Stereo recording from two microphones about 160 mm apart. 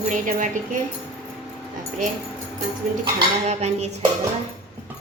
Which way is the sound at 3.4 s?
45° right (ahead or behind).